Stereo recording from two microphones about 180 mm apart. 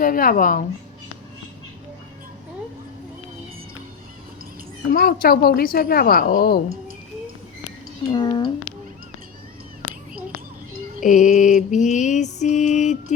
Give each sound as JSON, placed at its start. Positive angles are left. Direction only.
{"t": 0.0, "sound": "speech", "side_deg": 50}
{"t": 4.9, "sound": "a woman's voice", "side_deg": 55}
{"t": 8.1, "sound": "speech", "side_deg": 25}
{"t": 11.0, "sound": "mantra", "side_deg": 45}